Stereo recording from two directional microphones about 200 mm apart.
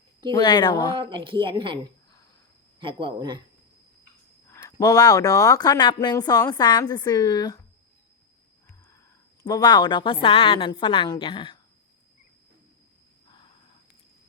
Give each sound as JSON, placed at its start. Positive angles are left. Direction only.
{"t": 0.3, "sound": "speech", "side_deg": 20}
{"t": 0.9, "sound": "speech", "side_deg": -25}
{"t": 4.4, "sound": "speech", "side_deg": 15}
{"t": 9.4, "sound": "speech", "side_deg": 20}